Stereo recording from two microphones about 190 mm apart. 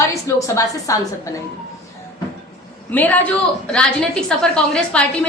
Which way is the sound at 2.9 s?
10° left (ahead or behind).